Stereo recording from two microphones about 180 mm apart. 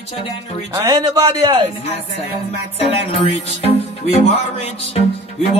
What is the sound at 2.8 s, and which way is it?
Speech, 35° left (ahead or behind).